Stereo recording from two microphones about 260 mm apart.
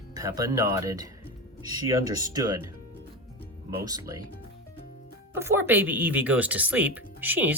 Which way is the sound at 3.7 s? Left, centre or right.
Centre.